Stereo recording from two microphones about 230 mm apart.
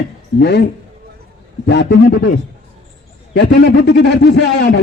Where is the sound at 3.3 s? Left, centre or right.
Left.